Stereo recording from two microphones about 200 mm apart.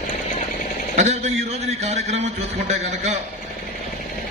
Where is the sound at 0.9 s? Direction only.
35° right (ahead or behind).